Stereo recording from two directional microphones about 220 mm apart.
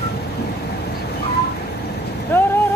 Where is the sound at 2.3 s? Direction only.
10° left (ahead or behind).